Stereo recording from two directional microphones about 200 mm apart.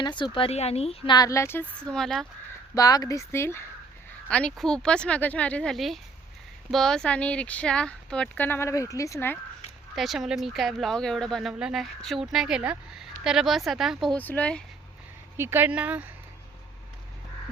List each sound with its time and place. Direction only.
0.0 s a woman's voice: 25° left (ahead or behind); by 2.2 s centre (ahead or behind)
2.7 s speech: 20° left (ahead or behind)
9.9 s speech: centre (ahead or behind)
15.4 s speech: 10° right (ahead or behind)